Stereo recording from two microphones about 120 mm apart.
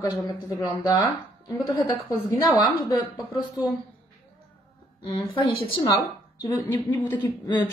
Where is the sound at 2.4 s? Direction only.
35° left (ahead or behind).